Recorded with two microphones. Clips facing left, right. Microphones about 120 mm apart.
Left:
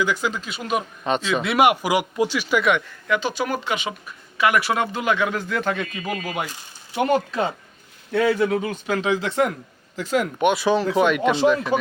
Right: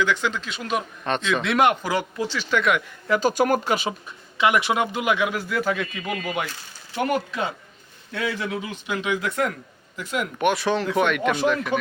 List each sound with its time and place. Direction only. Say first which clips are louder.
0.0 s speech: even; 5° left (ahead or behind)
3.1 s speech: right 3 dB; 40° right (ahead or behind)
4.4 s speech: even; 20° right (ahead or behind); by 6.5 s 5° left (ahead or behind)
6.5 s speech: left 2 dB; 20° left (ahead or behind)
7.3 s speech: left 4 dB; 35° left (ahead or behind)
10.5 s speech: left 5 dB; 10° left (ahead or behind)
10.8 s speech: left 3 dB; 25° left (ahead or behind)